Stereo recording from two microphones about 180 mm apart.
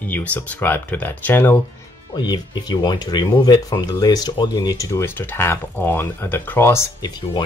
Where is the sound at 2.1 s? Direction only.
25° left (ahead or behind).